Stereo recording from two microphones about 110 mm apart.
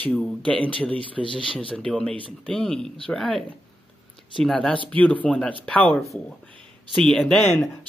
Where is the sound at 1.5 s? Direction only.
55° left (ahead or behind).